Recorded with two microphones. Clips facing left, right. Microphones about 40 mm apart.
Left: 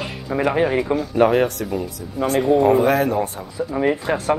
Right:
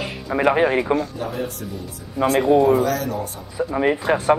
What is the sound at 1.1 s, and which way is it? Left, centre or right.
Speech, left.